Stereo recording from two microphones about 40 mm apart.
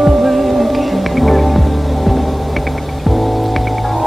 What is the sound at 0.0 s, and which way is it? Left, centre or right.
Music, centre.